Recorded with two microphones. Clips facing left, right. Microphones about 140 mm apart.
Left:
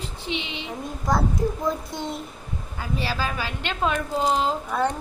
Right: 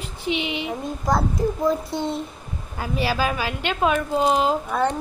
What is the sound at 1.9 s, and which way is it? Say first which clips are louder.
Speech: right 5 dB; 30° right (ahead or behind).